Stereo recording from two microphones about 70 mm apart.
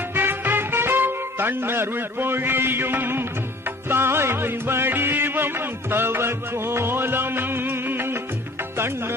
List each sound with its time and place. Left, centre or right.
0.1 s music: right